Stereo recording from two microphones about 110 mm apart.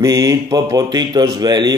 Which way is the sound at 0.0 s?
35° right (ahead or behind).